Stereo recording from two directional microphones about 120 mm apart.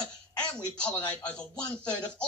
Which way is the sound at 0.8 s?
10° left (ahead or behind).